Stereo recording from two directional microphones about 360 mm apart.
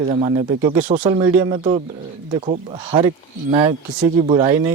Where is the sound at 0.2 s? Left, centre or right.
Centre.